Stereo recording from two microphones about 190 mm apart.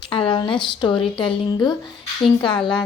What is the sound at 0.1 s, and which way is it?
A woman's voice, 25° left (ahead or behind).